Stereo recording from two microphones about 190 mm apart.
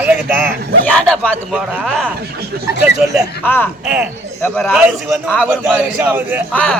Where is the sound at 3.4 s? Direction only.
10° left (ahead or behind).